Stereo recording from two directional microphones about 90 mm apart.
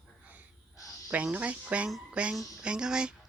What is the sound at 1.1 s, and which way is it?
Speech, 15° right (ahead or behind).